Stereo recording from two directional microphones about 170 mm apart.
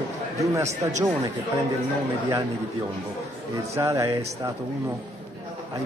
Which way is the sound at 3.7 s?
20° right (ahead or behind).